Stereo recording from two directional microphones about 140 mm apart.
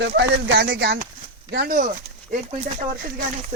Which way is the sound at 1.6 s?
90° right.